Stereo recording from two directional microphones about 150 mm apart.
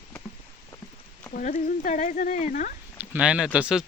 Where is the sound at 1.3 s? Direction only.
60° left (ahead or behind).